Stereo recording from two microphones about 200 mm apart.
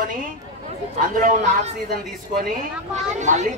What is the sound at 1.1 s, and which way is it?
Speech, 40° right (ahead or behind).